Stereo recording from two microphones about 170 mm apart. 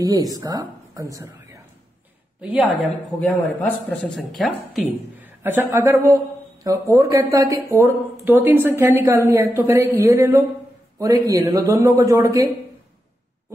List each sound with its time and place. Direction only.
0.0 s a woman's voice: 20° right (ahead or behind)
2.4 s speech: 10° right (ahead or behind)
3.2 s speech: 10° left (ahead or behind)
5.4 s a man's voice: 15° right (ahead or behind)